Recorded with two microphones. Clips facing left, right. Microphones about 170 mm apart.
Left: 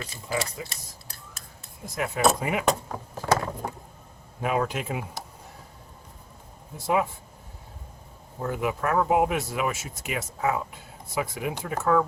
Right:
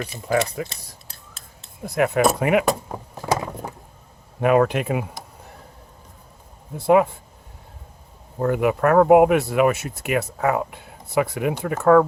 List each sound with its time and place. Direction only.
0.3 s speech: 55° right (ahead or behind)
0.7 s a sound: 25° right (ahead or behind)
1.8 s speech: 65° right (ahead or behind)
4.4 s speech: 60° right (ahead or behind)
6.7 s speech: 60° right (ahead or behind)
8.4 s speech: 60° right (ahead or behind)